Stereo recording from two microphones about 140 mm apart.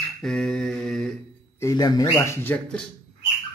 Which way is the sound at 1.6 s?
25° left (ahead or behind).